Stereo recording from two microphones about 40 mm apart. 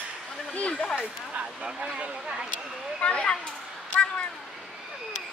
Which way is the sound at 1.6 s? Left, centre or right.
Right.